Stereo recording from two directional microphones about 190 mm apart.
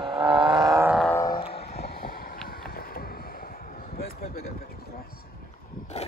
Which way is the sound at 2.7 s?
50° left (ahead or behind).